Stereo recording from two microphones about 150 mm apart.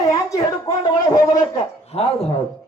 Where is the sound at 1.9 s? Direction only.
40° left (ahead or behind).